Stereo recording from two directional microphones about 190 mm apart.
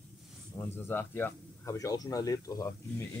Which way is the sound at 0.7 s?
10° left (ahead or behind).